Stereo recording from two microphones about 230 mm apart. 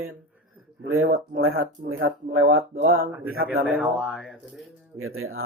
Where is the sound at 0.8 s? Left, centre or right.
Right.